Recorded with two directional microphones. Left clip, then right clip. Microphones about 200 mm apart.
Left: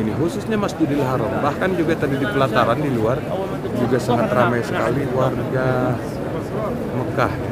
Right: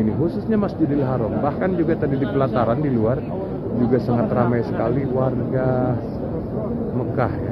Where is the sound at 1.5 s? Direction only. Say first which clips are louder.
Left 1 dB; 5° left (ahead or behind).